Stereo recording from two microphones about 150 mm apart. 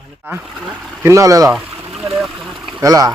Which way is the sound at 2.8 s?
25° right (ahead or behind).